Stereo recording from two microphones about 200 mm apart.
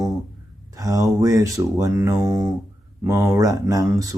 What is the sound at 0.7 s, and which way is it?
Speech, 15° right (ahead or behind).